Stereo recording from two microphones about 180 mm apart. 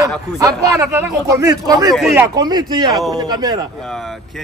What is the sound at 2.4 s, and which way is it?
Speech, 20° right (ahead or behind).